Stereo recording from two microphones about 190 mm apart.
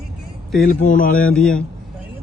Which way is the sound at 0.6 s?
45° left (ahead or behind).